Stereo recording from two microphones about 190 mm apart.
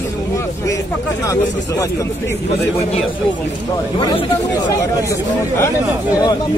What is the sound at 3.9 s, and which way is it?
Speech, 25° left (ahead or behind).